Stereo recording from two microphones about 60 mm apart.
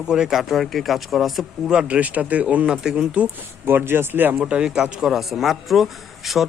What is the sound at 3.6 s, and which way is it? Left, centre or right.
Speech, right.